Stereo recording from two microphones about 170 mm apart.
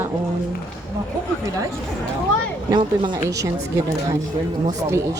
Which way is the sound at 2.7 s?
25° right (ahead or behind).